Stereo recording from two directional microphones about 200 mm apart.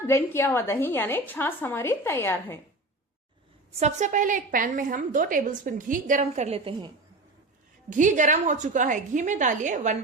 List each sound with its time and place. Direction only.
0.1 s a woman's voice: 15° left (ahead or behind)
3.8 s a woman's voice: 35° right (ahead or behind)
7.9 s a woman's voice: 40° right (ahead or behind)